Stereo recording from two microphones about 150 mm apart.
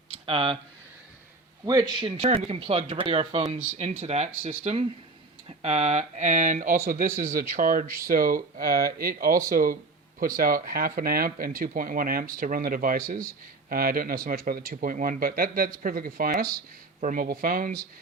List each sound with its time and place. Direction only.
0.3 s speech: 35° right (ahead or behind)
1.6 s speech: 25° right (ahead or behind); by 17.7 s 75° right (ahead or behind)